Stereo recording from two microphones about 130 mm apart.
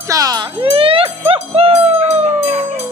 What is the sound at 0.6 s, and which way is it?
Speech, 45° right (ahead or behind).